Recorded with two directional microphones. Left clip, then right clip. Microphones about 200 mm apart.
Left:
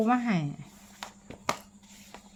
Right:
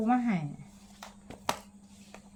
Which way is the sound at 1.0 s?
15° left (ahead or behind).